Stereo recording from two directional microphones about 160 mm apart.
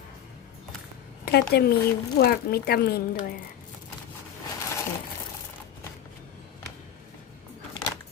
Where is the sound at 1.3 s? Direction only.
90° left; by 3.3 s 75° left (ahead or behind).